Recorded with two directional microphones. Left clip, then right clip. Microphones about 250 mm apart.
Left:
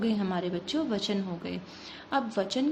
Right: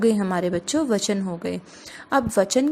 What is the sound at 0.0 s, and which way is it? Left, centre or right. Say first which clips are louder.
A woman's voice: right 10 dB; right.